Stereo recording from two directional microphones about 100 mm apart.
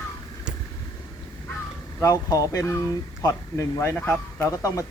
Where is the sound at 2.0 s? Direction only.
35° left (ahead or behind).